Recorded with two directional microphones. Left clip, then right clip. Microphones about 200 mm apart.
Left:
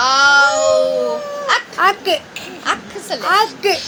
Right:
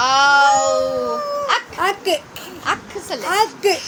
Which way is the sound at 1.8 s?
40° right (ahead or behind).